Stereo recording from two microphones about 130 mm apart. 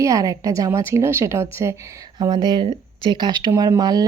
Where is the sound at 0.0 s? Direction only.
25° right (ahead or behind).